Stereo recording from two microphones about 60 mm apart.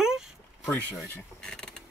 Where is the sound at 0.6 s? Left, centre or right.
Left.